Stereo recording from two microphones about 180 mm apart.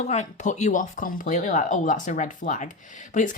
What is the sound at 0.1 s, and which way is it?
Speech, 40° left (ahead or behind).